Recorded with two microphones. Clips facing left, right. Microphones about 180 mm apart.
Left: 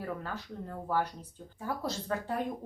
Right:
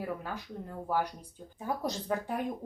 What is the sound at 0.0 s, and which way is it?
Speech, 15° right (ahead or behind).